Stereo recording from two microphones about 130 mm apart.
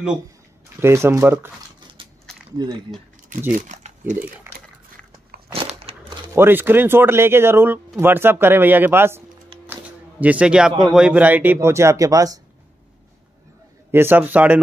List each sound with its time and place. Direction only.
0.7 s speech: 20° right (ahead or behind)
2.0 s a sound: 40° right (ahead or behind)
2.5 s speech: 30° right (ahead or behind)
3.5 s speech: 65° right (ahead or behind)
5.5 s crumpling: 50° right (ahead or behind)
6.3 s speech: 15° right (ahead or behind)
10.2 s speech: 10° right (ahead or behind); by 12.4 s 25° right (ahead or behind)
13.9 s speech: 15° right (ahead or behind)